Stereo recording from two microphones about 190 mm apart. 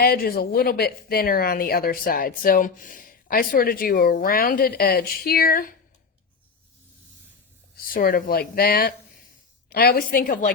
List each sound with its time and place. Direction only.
0.0 s speech: 50° left (ahead or behind)
7.9 s speech: 50° left (ahead or behind)